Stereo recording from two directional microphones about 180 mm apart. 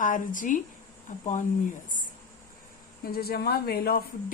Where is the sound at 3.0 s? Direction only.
60° left (ahead or behind).